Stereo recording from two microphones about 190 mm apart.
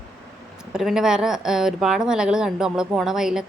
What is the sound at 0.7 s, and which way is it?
A woman's voice, 5° right (ahead or behind).